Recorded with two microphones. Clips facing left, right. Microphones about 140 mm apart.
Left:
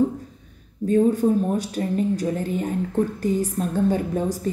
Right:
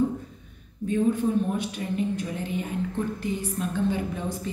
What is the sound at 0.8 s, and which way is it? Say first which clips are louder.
A woman's voice: left 6 dB; 40° left (ahead or behind).